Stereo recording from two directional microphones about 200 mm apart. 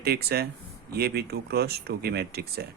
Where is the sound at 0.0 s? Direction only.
50° right (ahead or behind).